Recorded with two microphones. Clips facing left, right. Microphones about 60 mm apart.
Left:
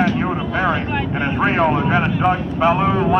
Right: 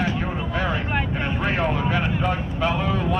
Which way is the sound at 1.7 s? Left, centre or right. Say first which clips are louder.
Left 6 dB; left.